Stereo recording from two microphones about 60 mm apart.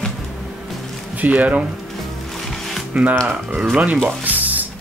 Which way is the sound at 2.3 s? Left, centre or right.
Centre.